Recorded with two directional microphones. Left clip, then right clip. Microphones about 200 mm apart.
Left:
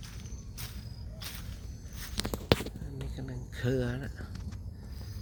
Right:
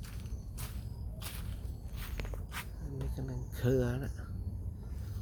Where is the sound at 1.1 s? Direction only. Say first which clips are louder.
Left 4 dB; centre (ahead or behind).